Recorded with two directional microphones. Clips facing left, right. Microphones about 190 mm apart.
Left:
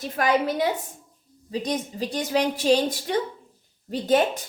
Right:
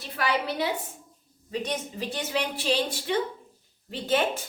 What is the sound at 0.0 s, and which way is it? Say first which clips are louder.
Speech: left 6 dB; 45° left (ahead or behind).